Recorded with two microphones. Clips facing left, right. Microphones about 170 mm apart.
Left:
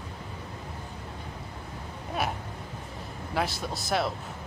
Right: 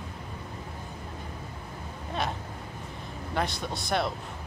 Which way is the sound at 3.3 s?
5° left (ahead or behind).